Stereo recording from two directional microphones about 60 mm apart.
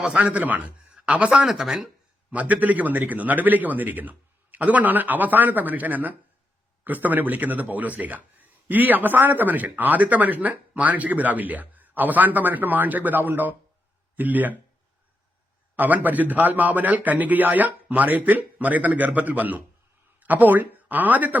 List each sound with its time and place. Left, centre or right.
0.0 s a man's voice: right
1.5 s speech: centre
2.3 s a man's voice: right
15.7 s a man's voice: right